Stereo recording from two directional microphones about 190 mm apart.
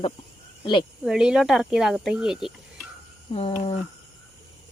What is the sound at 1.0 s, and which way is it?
Speech, 5° right (ahead or behind).